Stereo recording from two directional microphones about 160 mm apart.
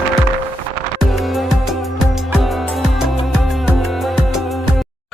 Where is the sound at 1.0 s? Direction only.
Centre (ahead or behind).